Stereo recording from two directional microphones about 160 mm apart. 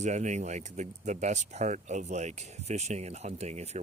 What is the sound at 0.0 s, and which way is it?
Speech, 50° right (ahead or behind).